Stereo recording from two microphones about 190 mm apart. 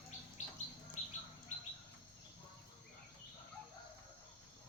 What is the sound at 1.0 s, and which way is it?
Bird, 40° left (ahead or behind).